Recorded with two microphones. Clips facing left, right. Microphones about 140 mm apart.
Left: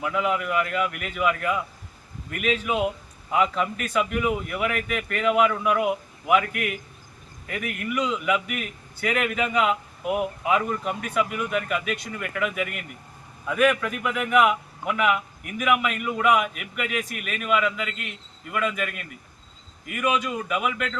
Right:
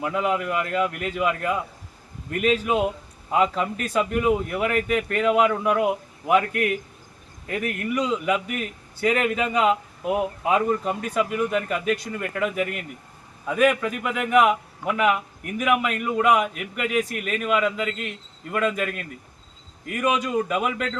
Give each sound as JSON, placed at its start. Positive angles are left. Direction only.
{"t": 0.0, "sound": "a man's voice", "side_deg": -30}